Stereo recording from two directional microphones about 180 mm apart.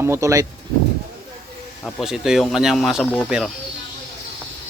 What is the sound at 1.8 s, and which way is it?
Speech, centre (ahead or behind).